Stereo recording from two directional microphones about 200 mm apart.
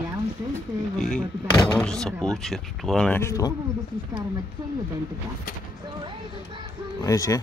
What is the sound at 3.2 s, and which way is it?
Speech, 15° left (ahead or behind).